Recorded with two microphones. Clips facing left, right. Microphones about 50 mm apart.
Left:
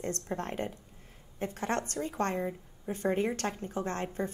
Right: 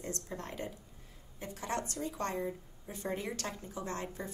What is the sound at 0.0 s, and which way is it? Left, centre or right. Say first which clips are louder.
Speech: left 6 dB; left.